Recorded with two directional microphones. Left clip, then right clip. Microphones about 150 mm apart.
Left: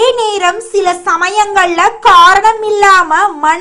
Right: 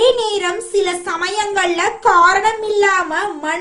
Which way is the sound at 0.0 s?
30° left (ahead or behind).